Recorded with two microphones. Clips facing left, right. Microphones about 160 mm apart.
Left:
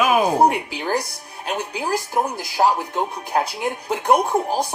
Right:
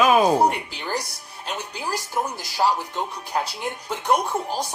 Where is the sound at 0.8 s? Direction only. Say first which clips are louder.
Left 5 dB; 55° left (ahead or behind).